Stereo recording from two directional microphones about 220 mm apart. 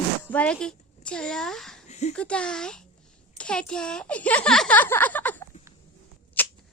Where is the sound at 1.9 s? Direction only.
30° left (ahead or behind).